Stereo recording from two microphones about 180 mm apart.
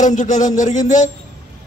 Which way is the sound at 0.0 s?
45° left (ahead or behind).